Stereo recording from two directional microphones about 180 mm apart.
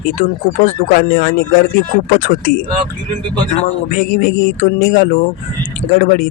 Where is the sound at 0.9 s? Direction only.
55° left (ahead or behind).